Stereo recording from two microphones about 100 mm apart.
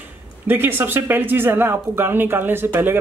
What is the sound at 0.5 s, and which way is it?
Speech, 20° right (ahead or behind).